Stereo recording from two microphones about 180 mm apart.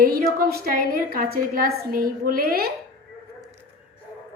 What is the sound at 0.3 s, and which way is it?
A woman's voice, 55° right (ahead or behind).